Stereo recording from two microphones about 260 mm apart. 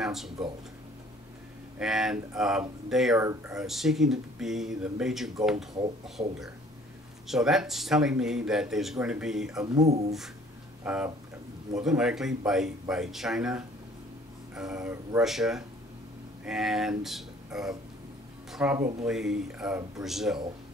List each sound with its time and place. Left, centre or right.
0.0 s a sound: centre
1.8 s speech: centre
9.8 s speech: right
10.8 s speech: centre